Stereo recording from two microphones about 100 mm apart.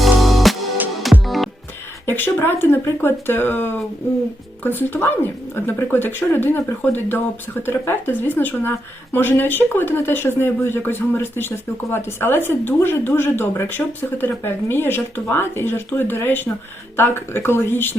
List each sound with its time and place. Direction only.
0.0 s music: centre (ahead or behind)
2.0 s speech: 20° left (ahead or behind)